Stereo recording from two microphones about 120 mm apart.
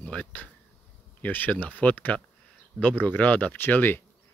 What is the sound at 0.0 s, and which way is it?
Speech, 10° left (ahead or behind).